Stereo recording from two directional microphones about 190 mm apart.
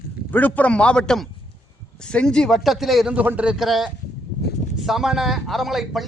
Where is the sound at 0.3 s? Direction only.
10° left (ahead or behind).